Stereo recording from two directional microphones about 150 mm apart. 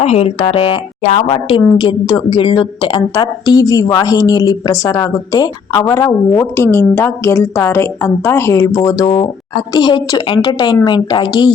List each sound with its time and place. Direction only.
0.0 s a woman's voice: 45° left (ahead or behind); by 9.0 s 20° left (ahead or behind)
9.0 s a woman's voice: 35° left (ahead or behind)